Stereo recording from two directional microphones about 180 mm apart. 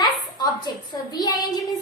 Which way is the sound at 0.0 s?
20° left (ahead or behind).